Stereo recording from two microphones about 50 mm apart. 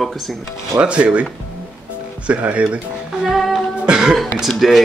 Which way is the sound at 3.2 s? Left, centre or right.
Centre.